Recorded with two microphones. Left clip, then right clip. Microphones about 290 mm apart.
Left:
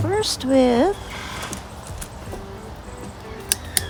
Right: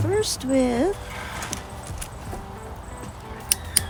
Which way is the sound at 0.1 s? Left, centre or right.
Centre.